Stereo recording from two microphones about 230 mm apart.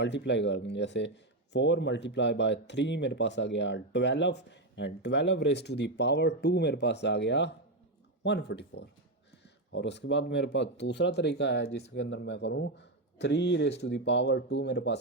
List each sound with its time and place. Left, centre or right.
0.0 s speech: left